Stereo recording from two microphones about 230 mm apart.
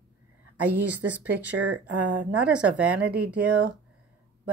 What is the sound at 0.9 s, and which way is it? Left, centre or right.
Speech, centre.